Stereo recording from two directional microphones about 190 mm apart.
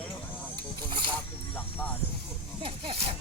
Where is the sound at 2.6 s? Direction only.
30° right (ahead or behind).